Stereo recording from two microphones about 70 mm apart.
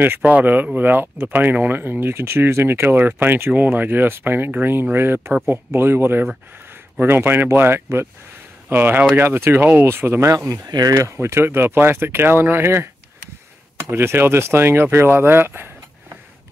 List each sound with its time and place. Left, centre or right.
0.0 s speech: right
10.3 s speech: right
10.7 s speech: right
11.0 s speech: right